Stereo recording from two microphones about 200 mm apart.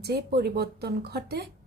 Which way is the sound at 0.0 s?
50° right (ahead or behind).